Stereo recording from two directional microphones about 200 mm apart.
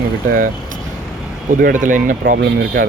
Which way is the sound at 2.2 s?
65° right (ahead or behind).